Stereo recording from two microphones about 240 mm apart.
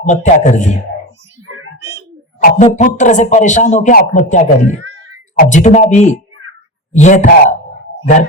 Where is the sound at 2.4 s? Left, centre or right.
Left.